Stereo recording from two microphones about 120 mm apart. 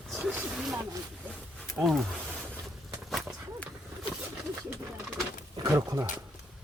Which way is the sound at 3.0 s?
Centre (ahead or behind).